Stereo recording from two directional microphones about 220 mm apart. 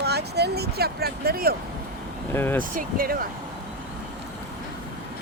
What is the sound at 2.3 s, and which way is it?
Speech, 10° left (ahead or behind).